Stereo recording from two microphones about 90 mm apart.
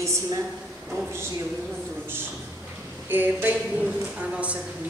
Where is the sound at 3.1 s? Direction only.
20° right (ahead or behind).